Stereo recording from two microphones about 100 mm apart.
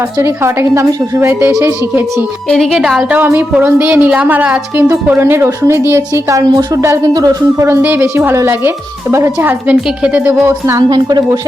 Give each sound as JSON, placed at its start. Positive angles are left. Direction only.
{"t": 0.2, "sound": "a woman's voice", "side_deg": -30}
{"t": 2.5, "sound": "speech", "side_deg": 0}
{"t": 3.2, "sound": "a woman's voice", "side_deg": -20}
{"t": 10.8, "sound": "a woman's voice", "side_deg": -45}